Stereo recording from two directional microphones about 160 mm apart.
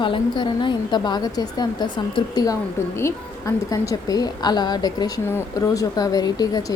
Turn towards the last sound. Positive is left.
turn(degrees=25)  # may be behind; listen again after turning